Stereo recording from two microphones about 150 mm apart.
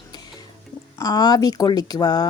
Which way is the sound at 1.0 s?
25° left (ahead or behind).